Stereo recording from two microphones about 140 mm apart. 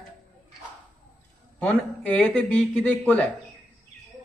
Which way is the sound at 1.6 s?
10° left (ahead or behind).